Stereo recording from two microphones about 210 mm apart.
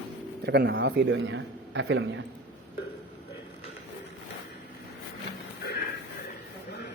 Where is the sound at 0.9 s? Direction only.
60° right (ahead or behind).